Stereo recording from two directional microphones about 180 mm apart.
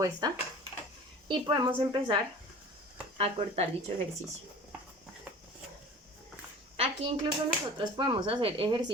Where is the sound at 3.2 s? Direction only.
35° right (ahead or behind).